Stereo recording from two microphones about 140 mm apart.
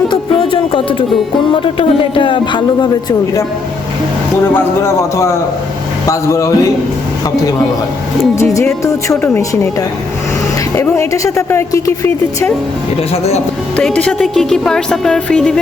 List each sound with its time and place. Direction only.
0.1 s music: 35° left (ahead or behind)
1.6 s speech: 40° left (ahead or behind)
4.5 s a woman's voice: 20° left (ahead or behind)
8.5 s a woman's voice: 20° left (ahead or behind)
10.8 s a woman's voice: 20° left (ahead or behind)
13.7 s speech: 10° left (ahead or behind)